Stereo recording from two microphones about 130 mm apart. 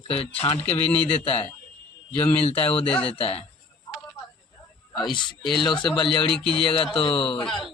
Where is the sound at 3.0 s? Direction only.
45° left (ahead or behind).